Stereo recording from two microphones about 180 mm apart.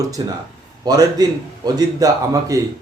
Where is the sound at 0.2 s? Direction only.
25° right (ahead or behind).